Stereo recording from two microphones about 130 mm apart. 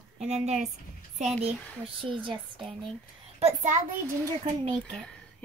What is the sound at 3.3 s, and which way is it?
Speech, 55° right (ahead or behind).